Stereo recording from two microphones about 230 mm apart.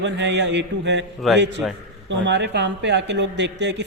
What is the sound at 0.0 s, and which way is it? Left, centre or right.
A man's voice, right.